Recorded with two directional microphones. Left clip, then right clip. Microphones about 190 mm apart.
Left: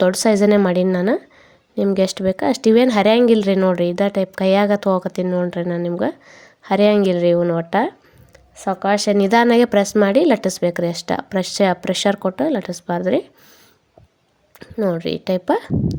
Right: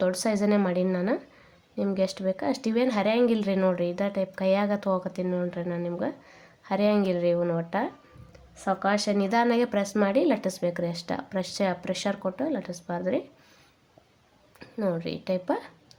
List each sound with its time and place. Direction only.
0.0 s speech: 40° left (ahead or behind)
14.6 s speech: 30° left (ahead or behind)